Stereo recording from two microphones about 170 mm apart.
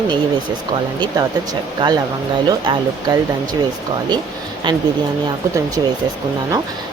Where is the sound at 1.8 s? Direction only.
30° right (ahead or behind).